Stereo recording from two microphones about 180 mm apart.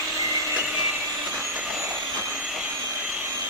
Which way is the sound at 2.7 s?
5° right (ahead or behind).